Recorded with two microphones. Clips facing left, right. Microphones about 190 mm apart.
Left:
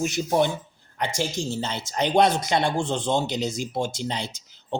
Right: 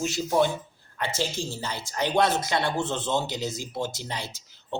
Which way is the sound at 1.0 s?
15° left (ahead or behind).